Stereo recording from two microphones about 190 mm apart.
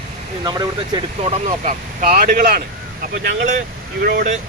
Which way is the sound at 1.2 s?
40° right (ahead or behind).